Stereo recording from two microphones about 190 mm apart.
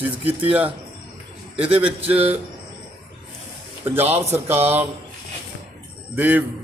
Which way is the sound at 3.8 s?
10° right (ahead or behind).